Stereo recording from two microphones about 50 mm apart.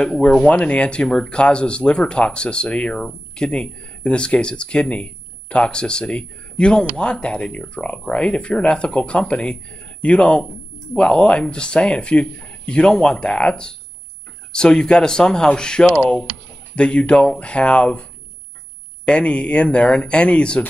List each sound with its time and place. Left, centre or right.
0.0 s speech: centre
19.0 s speech: left